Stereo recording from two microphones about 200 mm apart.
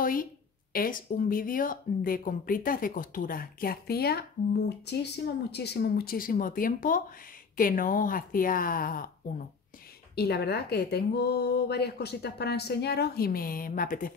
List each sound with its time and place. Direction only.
0.0 s a woman's voice: 45° left (ahead or behind)
10.1 s a woman's voice: 55° left (ahead or behind)